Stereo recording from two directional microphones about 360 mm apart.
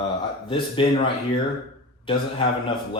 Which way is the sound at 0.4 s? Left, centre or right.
Centre.